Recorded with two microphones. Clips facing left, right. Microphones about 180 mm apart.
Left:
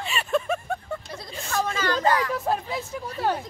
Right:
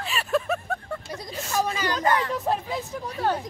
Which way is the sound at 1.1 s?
10° right (ahead or behind).